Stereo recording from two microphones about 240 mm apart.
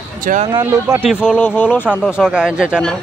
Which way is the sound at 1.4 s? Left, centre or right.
Centre.